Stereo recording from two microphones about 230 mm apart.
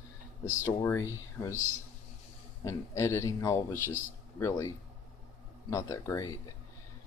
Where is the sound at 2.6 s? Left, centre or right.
Centre.